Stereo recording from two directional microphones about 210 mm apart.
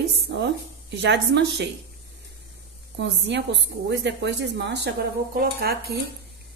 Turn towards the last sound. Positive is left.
turn(degrees=-50)  # may be behind; listen again after turning